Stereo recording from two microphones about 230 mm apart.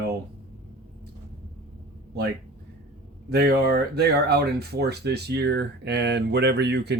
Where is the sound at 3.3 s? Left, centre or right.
Right.